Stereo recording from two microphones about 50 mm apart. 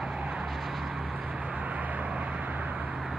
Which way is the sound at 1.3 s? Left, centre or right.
Right.